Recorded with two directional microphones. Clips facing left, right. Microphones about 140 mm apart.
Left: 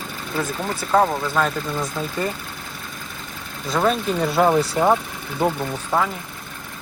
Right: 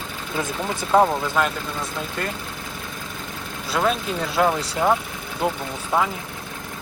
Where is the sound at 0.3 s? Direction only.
15° right (ahead or behind).